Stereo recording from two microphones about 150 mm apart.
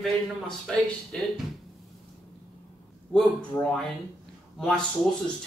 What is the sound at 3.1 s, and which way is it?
A man's voice, 5° left (ahead or behind).